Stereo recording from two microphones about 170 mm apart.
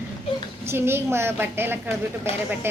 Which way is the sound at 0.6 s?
15° right (ahead or behind).